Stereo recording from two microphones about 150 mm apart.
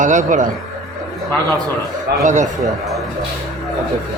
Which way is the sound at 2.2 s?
55° right (ahead or behind).